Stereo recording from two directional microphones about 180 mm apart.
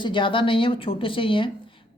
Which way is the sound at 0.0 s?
25° left (ahead or behind).